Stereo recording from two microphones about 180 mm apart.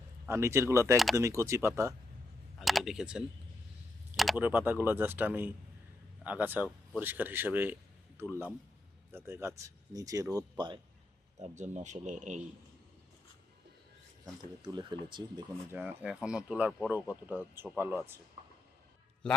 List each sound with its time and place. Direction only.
0.3 s speech: 15° right (ahead or behind)
2.6 s speech: centre (ahead or behind); by 10.8 s 25° right (ahead or behind)
11.3 s speech: 40° right (ahead or behind)
14.6 s speech: 25° right (ahead or behind)
15.7 s speech: 10° right (ahead or behind)